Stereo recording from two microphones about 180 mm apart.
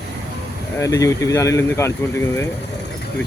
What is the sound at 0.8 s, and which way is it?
Speech, 20° left (ahead or behind).